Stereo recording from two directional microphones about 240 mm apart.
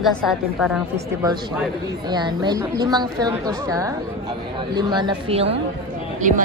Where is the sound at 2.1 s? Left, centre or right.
Centre; by 6.4 s right.